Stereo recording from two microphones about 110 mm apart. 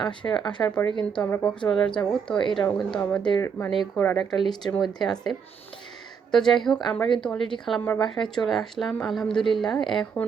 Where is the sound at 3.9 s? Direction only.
20° left (ahead or behind).